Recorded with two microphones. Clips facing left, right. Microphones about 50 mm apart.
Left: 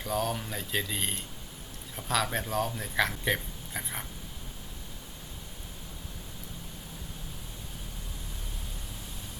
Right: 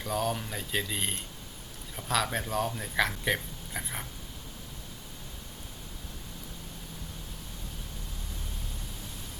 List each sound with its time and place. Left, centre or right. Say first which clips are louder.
0.0 s speech: even; centre